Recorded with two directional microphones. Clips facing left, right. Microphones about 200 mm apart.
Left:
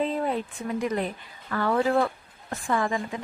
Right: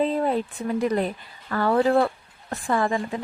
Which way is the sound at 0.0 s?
35° right (ahead or behind).